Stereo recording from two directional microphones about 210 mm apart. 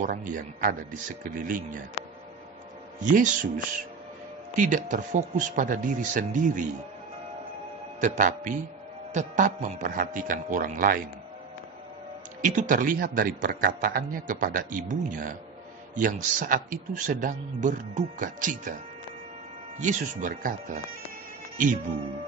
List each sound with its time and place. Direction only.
0.0 s a man's voice: 40° right (ahead or behind)
3.0 s a man's voice: 40° right (ahead or behind)
8.0 s a man's voice: 35° right (ahead or behind)
12.4 s a man's voice: 40° right (ahead or behind)
19.8 s a man's voice: 35° right (ahead or behind)